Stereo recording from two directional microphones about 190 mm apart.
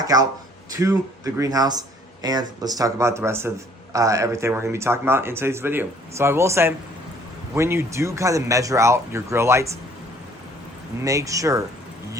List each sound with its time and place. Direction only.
0.0 s speech: 20° right (ahead or behind)
11.0 s speech: 15° right (ahead or behind)